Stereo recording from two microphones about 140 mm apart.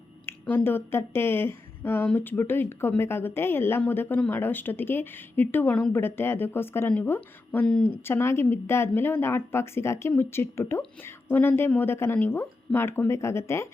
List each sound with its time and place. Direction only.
0.3 s a woman's voice: 15° left (ahead or behind)